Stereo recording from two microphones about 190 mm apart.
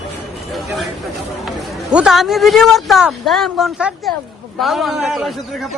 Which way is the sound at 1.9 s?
Centre (ahead or behind).